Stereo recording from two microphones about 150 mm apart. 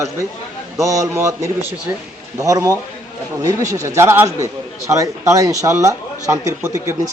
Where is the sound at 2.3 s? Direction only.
20° right (ahead or behind).